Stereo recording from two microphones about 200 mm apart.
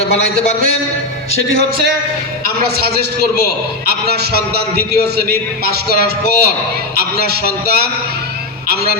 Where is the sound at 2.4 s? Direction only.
50° right (ahead or behind).